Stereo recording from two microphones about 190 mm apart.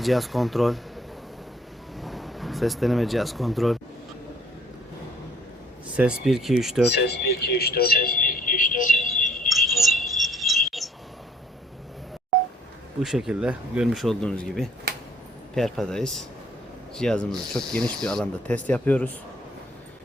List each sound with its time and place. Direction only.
0.0 s speech: centre (ahead or behind)
2.0 s speech: centre (ahead or behind)
6.0 s speech: 5° right (ahead or behind)
6.9 s speech: 60° left (ahead or behind); by 9.2 s 45° left (ahead or behind)
9.6 s a sound: centre (ahead or behind)
13.0 s speech: centre (ahead or behind)